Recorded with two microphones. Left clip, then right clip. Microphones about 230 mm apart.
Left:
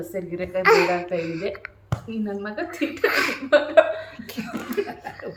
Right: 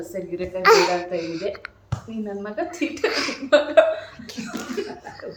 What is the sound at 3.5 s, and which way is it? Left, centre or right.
Speech, centre.